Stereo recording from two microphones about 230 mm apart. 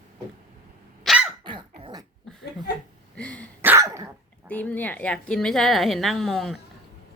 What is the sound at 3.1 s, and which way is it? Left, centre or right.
Throat clearing, centre.